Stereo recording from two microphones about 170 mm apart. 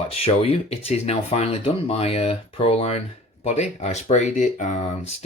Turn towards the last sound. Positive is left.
turn(degrees=40)  # may be behind; listen again after turning